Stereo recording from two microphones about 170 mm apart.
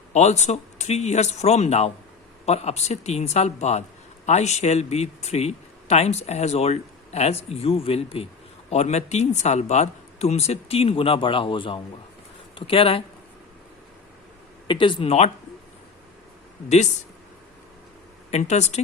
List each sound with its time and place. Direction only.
0.1 s speech: 40° left (ahead or behind)
14.7 s speech: 30° left (ahead or behind)
18.3 s speech: 40° left (ahead or behind)